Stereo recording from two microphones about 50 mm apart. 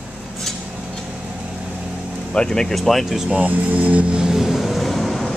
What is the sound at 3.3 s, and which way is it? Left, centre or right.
Speech, right.